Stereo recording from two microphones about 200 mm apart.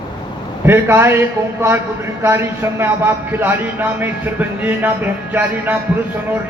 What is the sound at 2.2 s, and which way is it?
A man's voice, 10° right (ahead or behind).